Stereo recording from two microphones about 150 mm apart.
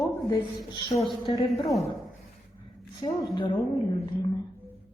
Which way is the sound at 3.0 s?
30° left (ahead or behind).